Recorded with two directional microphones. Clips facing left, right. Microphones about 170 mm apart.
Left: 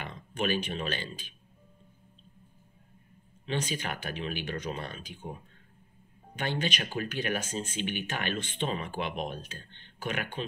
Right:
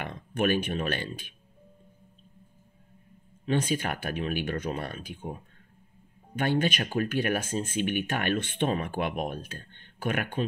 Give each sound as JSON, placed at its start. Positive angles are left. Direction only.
{"t": 0.0, "sound": "speech", "side_deg": -55}
{"t": 3.4, "sound": "speech", "side_deg": -55}
{"t": 6.3, "sound": "speech", "side_deg": -50}